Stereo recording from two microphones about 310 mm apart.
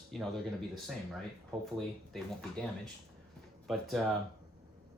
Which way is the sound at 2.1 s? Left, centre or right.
Centre.